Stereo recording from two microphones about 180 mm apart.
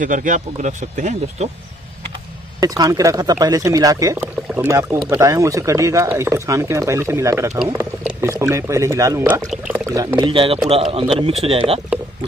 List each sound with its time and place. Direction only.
0.0 s speech: 45° right (ahead or behind)
2.6 s speech: 20° right (ahead or behind)
4.9 s speech: 5° right (ahead or behind)
5.2 s a man's voice: 15° right (ahead or behind)